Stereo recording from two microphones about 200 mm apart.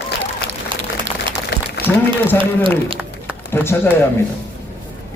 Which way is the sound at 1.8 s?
50° left (ahead or behind).